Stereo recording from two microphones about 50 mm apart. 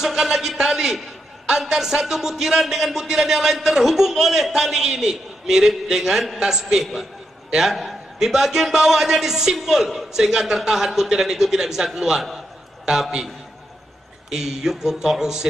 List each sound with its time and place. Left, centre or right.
0.0 s a man's voice: centre
14.3 s a man's voice: centre